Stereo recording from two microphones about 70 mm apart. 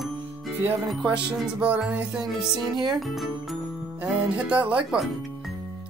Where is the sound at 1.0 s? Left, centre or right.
Centre.